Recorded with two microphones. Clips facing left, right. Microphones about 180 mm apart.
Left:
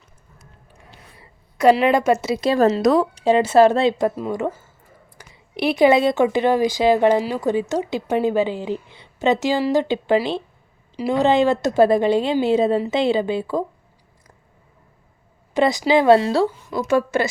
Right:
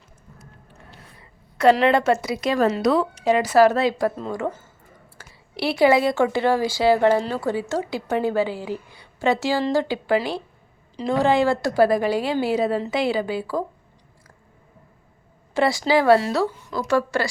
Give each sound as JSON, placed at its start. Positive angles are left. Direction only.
{"t": 1.7, "sound": "a woman's voice", "side_deg": 15}
{"t": 2.2, "sound": "a woman's voice", "side_deg": 30}
{"t": 5.1, "sound": "a woman's voice", "side_deg": 20}
{"t": 15.5, "sound": "a woman's voice", "side_deg": 20}